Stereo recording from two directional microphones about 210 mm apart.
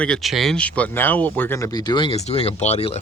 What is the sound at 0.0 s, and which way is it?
Speech, centre (ahead or behind).